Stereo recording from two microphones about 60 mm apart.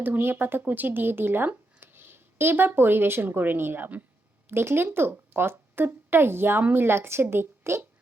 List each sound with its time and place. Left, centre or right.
0.0 s speech: right